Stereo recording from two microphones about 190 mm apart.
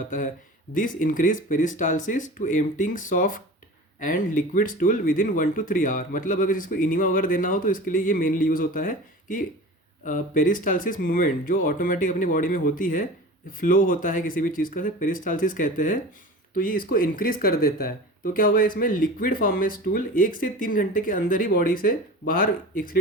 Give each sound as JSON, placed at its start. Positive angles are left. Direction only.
{"t": 0.7, "sound": "speech", "side_deg": 45}